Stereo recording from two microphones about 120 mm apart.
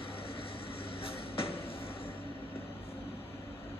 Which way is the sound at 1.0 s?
50° left (ahead or behind).